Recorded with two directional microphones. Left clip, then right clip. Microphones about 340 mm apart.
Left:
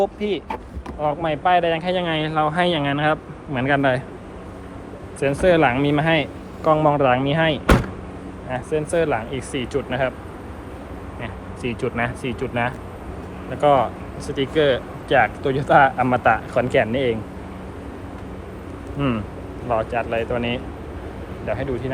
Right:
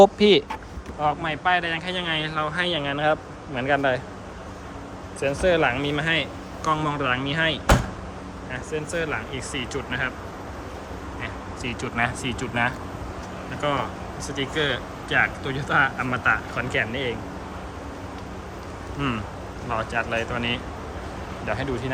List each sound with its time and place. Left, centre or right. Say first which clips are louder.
0.0 s speech: right 7 dB; right
1.0 s speech: left 3 dB; centre
5.2 s speech: left 4 dB; centre
11.2 s speech: left 3 dB; centre
18.9 s speech: left 4 dB; centre